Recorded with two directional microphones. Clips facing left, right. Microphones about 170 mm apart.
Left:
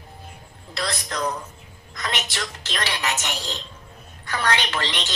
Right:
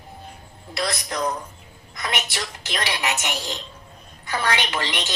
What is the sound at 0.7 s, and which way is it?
A woman's voice, 15° right (ahead or behind).